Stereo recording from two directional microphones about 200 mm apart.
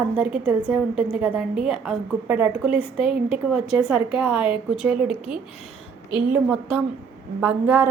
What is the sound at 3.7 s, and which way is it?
A woman's voice, 5° right (ahead or behind).